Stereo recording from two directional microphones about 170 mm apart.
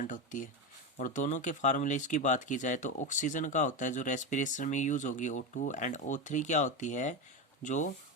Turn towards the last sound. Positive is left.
turn(degrees=45)  # may be behind; listen again after turning